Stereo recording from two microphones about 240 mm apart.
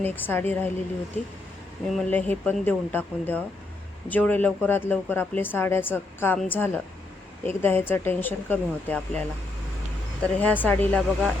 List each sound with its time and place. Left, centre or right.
0.0 s speech: centre
1.9 s speech: centre
10.4 s speech: centre